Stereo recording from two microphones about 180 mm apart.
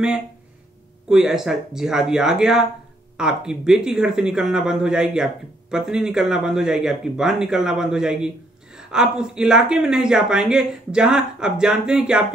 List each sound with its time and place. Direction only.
1.0 s speech: 5° right (ahead or behind)